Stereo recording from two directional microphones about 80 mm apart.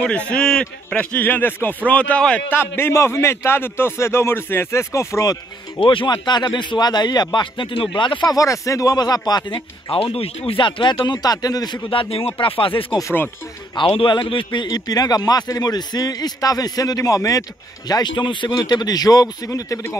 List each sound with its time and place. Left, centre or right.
0.0 s a man's voice: centre
0.9 s a man's voice: left
2.5 s a man's voice: left
5.8 s speech: left
8.3 s speech: left
11.1 s speech: left
12.4 s a man's voice: left
14.7 s a man's voice: left
18.1 s speech: left